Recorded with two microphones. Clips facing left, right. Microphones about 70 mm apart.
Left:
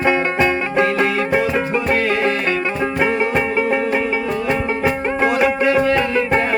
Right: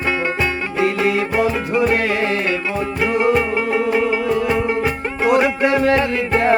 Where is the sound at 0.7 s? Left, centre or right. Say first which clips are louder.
Even; left.